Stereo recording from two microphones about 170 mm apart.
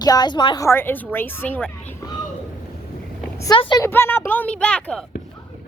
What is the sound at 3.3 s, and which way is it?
Speech, 20° left (ahead or behind).